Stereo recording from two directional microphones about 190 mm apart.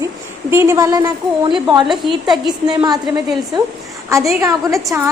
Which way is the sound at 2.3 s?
20° right (ahead or behind).